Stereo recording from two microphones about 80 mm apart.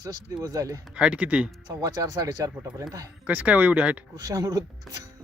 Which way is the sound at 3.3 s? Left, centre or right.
Centre.